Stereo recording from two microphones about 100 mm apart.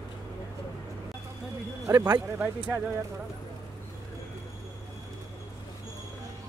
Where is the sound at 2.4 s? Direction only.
15° right (ahead or behind).